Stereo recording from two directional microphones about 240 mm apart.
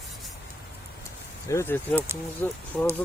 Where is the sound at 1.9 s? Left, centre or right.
Centre.